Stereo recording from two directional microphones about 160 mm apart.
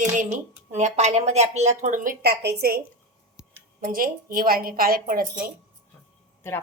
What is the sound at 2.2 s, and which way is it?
Speech, 90° right.